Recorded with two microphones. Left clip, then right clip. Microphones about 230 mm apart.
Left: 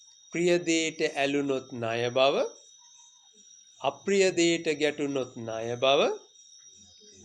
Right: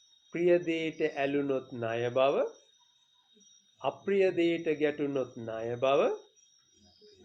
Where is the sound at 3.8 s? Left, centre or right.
Left.